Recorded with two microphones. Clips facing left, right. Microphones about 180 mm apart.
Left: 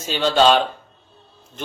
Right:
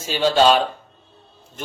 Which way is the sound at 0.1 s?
10° right (ahead or behind).